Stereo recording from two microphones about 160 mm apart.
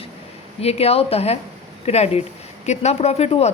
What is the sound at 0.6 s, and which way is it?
A woman's voice, 40° left (ahead or behind).